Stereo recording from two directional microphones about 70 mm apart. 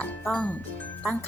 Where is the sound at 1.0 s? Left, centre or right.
Left.